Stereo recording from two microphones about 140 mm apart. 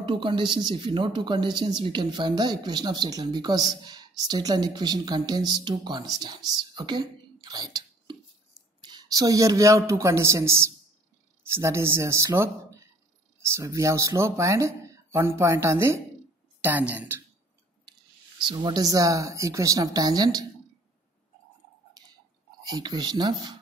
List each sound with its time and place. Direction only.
0.0 s speech: 35° right (ahead or behind); by 17.2 s 10° right (ahead or behind)
18.5 s speech: 30° right (ahead or behind)
22.7 s speech: 30° right (ahead or behind)